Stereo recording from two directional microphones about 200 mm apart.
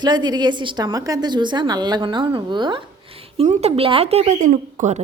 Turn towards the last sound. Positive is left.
turn(degrees=-35)  # may be behind; listen again after turning